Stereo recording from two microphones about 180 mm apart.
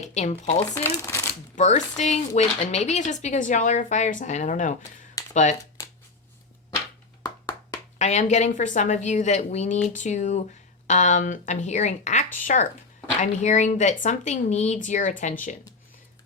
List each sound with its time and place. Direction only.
0.0 s speech: 40° left (ahead or behind)
0.7 s speech: 15° left (ahead or behind)
1.5 s speech: 40° left (ahead or behind)
7.2 s clapping: 20° left (ahead or behind)
7.9 s speech: 40° left (ahead or behind)